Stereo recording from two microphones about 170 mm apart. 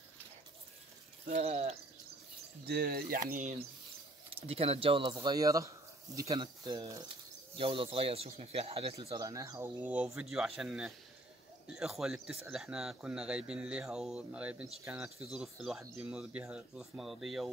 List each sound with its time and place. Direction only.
1.2 s speech: 40° right (ahead or behind)
2.6 s speech: 65° right (ahead or behind)
3.3 s speech: 50° right (ahead or behind)
4.4 s speech: 35° right (ahead or behind)
9.2 s speech: 20° right (ahead or behind); by 17.5 s centre (ahead or behind)